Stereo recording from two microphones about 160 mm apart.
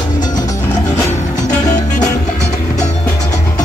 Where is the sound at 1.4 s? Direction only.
50° left (ahead or behind).